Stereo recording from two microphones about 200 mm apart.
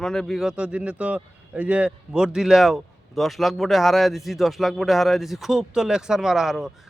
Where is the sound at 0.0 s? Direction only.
Centre (ahead or behind).